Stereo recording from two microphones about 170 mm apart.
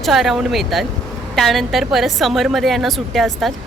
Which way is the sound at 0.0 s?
Centre (ahead or behind).